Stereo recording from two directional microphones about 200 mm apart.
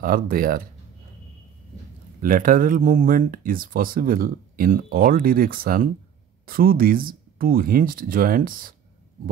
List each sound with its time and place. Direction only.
0.0 s speech: 45° right (ahead or behind)
2.2 s speech: 45° right (ahead or behind)